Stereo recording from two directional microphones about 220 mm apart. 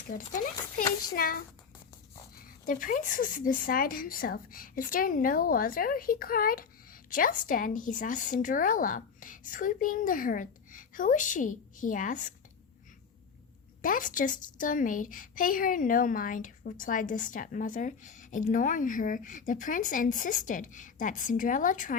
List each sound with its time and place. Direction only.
0.1 s speech: 35° left (ahead or behind)
2.6 s speech: 35° left (ahead or behind)
13.8 s speech: 40° left (ahead or behind)